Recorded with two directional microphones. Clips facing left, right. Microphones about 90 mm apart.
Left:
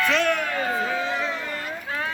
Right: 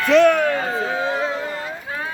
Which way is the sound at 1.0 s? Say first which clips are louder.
Right 5 dB; 35° right (ahead or behind).